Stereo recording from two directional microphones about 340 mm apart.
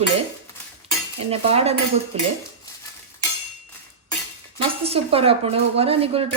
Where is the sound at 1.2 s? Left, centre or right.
Centre.